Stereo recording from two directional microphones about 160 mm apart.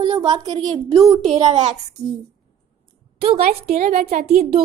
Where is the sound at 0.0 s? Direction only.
25° right (ahead or behind).